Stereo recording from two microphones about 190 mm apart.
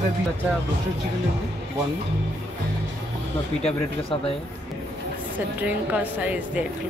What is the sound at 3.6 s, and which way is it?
Speech, 30° left (ahead or behind).